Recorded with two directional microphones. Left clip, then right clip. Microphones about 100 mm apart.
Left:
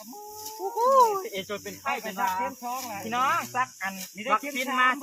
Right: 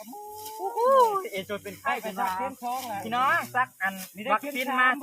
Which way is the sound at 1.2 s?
40° right (ahead or behind).